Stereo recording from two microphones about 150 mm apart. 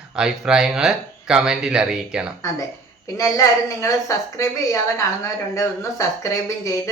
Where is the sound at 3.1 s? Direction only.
20° left (ahead or behind).